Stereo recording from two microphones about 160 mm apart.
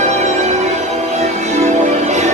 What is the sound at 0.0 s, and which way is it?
Music, 45° right (ahead or behind).